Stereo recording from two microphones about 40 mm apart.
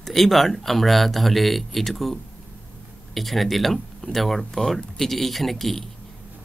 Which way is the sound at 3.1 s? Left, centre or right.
Centre.